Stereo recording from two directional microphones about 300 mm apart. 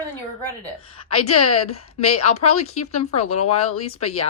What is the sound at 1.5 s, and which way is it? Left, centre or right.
Speech, left.